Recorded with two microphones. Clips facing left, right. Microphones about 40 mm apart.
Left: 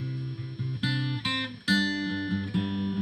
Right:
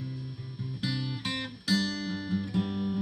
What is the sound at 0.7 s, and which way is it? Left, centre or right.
Music, left.